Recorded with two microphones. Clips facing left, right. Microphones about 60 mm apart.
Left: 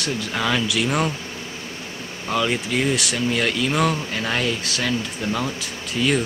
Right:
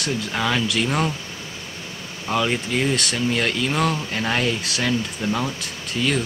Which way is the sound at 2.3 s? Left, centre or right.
Centre.